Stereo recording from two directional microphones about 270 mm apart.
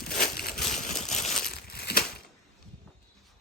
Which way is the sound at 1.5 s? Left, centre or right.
Left.